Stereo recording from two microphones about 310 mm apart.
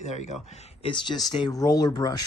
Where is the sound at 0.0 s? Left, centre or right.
Left.